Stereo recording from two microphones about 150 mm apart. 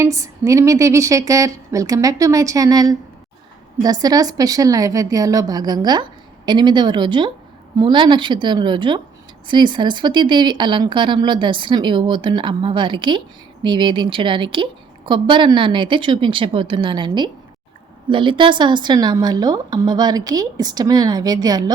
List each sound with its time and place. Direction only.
0.0 s a woman's voice: 20° right (ahead or behind)
4.0 s a woman's voice: 25° right (ahead or behind)